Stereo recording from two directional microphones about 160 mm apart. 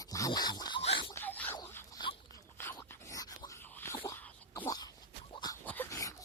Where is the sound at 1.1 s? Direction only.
10° left (ahead or behind).